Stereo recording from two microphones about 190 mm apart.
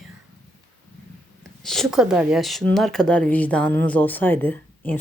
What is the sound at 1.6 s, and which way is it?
Speech, centre (ahead or behind).